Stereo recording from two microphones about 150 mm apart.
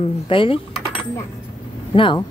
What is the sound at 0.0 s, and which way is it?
Speech, 35° left (ahead or behind).